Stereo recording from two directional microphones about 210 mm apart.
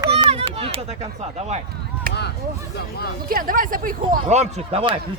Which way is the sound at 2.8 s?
50° left (ahead or behind).